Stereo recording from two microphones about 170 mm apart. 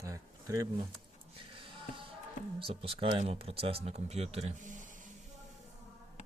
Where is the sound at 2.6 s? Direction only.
35° right (ahead or behind); by 5.0 s 50° right (ahead or behind).